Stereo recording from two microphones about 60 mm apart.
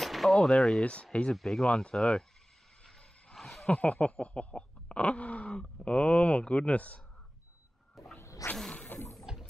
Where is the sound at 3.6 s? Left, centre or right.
Left.